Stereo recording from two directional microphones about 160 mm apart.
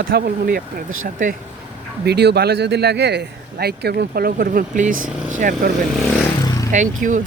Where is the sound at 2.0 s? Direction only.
90° right; by 5.7 s 55° right (ahead or behind).